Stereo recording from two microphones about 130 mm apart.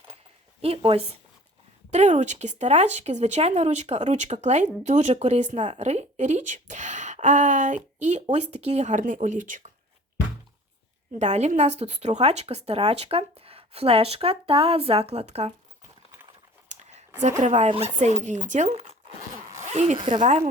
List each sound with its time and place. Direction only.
0.6 s speech: 45° right (ahead or behind)
1.9 s speech: 60° right (ahead or behind); by 9.7 s 80° right
11.2 s speech: 60° right (ahead or behind)
16.7 s a sound: 65° right (ahead or behind)
17.4 s speech: 65° right (ahead or behind)
17.7 s speech: 55° right (ahead or behind)
19.5 s zipper: 60° right (ahead or behind)
20.2 s speech: 60° right (ahead or behind)